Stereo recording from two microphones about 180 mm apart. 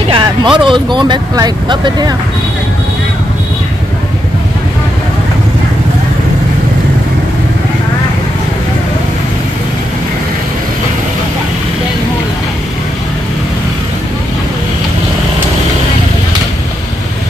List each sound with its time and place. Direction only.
0.1 s speech: 25° right (ahead or behind)